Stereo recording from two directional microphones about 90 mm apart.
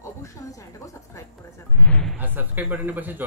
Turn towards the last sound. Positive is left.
turn(degrees=-20)  # may be behind; listen again after turning